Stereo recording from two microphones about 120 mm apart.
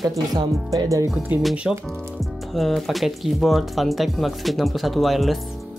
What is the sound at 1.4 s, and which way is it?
Speech, centre (ahead or behind).